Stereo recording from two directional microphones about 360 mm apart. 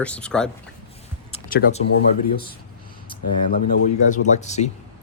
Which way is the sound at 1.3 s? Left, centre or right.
Left.